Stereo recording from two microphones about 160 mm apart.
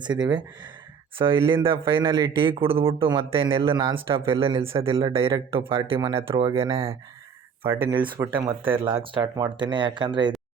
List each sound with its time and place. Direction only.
0.2 s a man's voice: 25° right (ahead or behind)